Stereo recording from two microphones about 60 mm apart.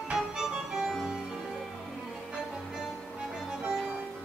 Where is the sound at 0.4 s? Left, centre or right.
Centre.